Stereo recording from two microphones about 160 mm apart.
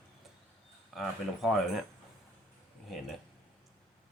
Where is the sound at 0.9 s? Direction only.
Centre (ahead or behind).